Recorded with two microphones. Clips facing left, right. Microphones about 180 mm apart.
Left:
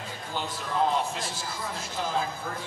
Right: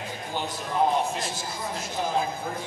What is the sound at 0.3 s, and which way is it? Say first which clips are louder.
Speech: right 1 dB; 15° right (ahead or behind).